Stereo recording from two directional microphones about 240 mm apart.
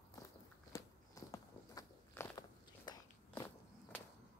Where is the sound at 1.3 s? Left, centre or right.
Centre.